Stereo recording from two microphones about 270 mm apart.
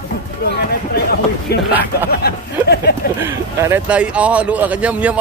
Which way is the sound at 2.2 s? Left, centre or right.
Left.